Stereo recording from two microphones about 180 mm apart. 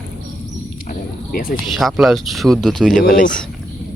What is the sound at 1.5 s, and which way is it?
Speech, centre (ahead or behind).